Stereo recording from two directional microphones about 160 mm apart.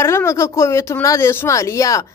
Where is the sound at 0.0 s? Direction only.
15° left (ahead or behind).